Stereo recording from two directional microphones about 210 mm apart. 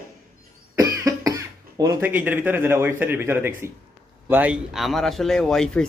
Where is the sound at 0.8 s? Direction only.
15° right (ahead or behind).